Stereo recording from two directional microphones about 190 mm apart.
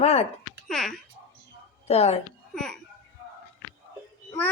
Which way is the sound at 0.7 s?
Centre (ahead or behind).